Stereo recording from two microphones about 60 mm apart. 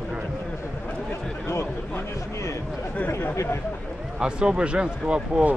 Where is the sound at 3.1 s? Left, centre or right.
Left.